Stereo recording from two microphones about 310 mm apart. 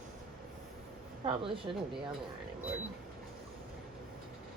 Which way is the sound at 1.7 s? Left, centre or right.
Centre.